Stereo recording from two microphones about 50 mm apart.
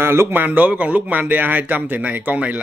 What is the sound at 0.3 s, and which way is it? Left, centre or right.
Speech, right.